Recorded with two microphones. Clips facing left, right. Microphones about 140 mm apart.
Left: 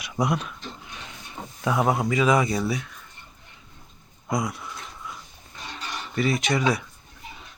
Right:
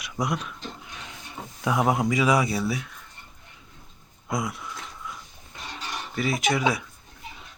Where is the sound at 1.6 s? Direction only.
10° right (ahead or behind).